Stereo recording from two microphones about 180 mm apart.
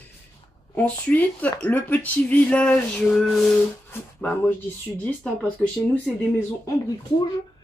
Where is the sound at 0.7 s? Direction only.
10° left (ahead or behind).